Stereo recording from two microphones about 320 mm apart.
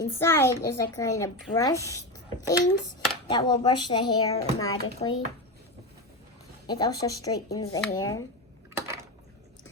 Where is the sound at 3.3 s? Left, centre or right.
Centre.